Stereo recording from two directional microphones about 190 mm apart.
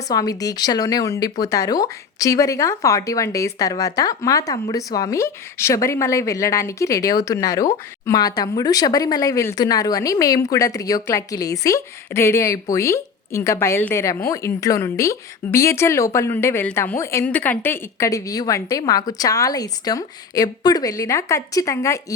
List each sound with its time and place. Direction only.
0.1 s speech: 20° left (ahead or behind)